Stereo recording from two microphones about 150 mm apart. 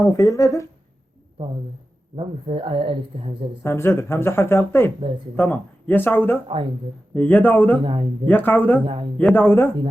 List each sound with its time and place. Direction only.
0.0 s speech: 20° left (ahead or behind)
2.1 s a woman's voice: 40° right (ahead or behind)
3.6 s speech: 15° left (ahead or behind)
7.9 s a woman's voice: 35° right (ahead or behind)
8.3 s speech: 10° left (ahead or behind)